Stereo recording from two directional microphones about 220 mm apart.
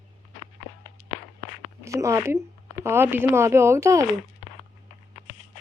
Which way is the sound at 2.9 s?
10° right (ahead or behind).